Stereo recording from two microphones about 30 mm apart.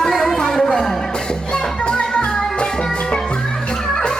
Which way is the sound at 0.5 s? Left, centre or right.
Centre.